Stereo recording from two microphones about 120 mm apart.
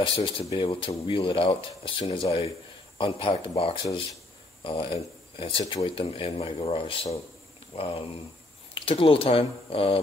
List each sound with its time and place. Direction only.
0.0 s speech: 45° left (ahead or behind)